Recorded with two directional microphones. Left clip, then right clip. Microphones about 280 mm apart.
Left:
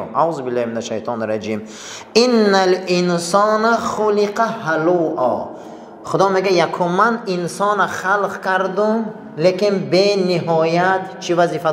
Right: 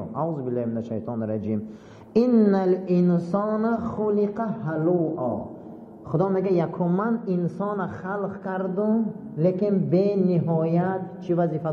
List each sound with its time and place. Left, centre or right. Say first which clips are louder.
0.1 s a man's voice: left 10 dB; centre
4.9 s a man's voice: left 9 dB; centre
6.0 s a man's voice: left 9 dB; centre